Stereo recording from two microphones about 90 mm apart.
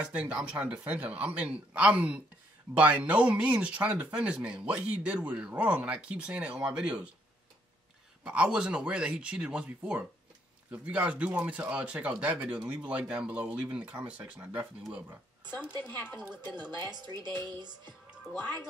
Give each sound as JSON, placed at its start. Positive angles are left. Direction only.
{"t": 0.0, "sound": "speech", "side_deg": -15}
{"t": 8.2, "sound": "speech", "side_deg": -10}
{"t": 15.8, "sound": "speech", "side_deg": 20}
{"t": 17.1, "sound": "speech", "side_deg": -50}